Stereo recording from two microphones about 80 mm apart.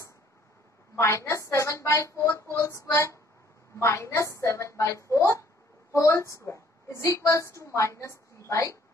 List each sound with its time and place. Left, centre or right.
0.9 s a woman's voice: left